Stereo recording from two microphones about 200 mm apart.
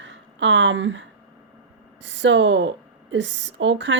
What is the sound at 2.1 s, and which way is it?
A woman's voice, 65° right (ahead or behind).